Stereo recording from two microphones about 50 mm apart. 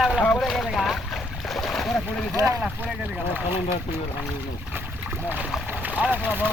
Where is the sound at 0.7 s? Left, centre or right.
Centre.